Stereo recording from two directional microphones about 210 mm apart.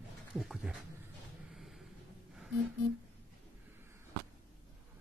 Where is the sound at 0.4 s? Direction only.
Centre (ahead or behind).